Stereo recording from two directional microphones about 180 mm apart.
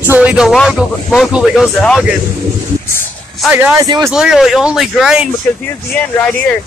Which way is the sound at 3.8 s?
20° right (ahead or behind).